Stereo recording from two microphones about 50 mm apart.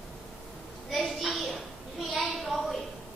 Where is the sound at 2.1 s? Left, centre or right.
Centre.